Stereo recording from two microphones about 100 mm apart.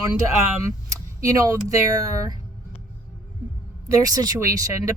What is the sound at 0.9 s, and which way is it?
Speech, 35° right (ahead or behind).